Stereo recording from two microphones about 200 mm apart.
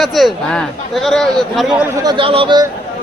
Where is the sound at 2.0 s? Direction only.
25° right (ahead or behind).